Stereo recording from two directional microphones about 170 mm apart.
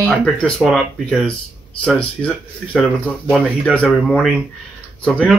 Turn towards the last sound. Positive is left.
turn(degrees=5)  # may be behind; listen again after turning